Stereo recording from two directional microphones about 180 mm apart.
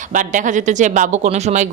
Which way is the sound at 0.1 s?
45° right (ahead or behind).